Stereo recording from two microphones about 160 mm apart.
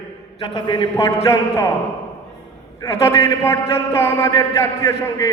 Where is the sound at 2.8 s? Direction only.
20° left (ahead or behind).